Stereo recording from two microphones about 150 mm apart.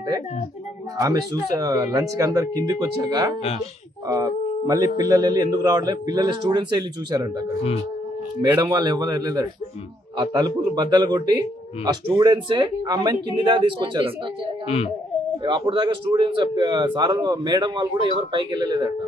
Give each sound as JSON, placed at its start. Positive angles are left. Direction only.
{"t": 0.9, "sound": "a man's voice", "side_deg": -25}
{"t": 8.5, "sound": "a man's voice", "side_deg": -25}
{"t": 15.4, "sound": "a man's voice", "side_deg": -35}